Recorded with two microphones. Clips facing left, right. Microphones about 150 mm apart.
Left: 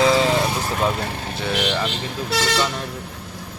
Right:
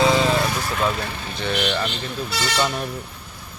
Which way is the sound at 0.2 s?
20° left (ahead or behind).